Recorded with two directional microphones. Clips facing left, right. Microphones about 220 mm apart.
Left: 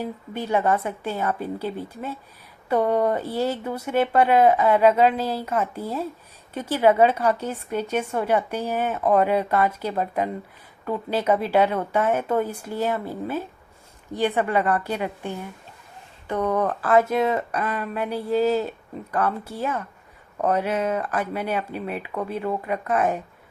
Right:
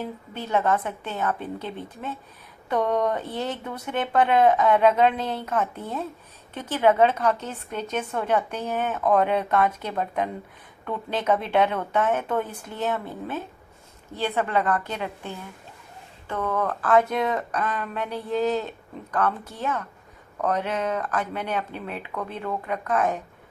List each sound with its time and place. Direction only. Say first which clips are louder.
0.0 s a woman's voice: left 3 dB; 10° left (ahead or behind)
16.9 s a woman's voice: left 2 dB; 5° left (ahead or behind)